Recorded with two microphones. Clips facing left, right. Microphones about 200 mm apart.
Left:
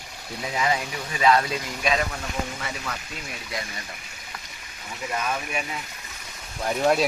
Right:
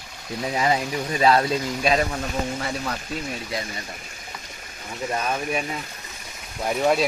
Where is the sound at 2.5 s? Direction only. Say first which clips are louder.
Right 6 dB; 40° right (ahead or behind).